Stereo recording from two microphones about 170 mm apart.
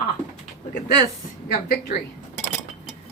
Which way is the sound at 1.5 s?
60° left (ahead or behind).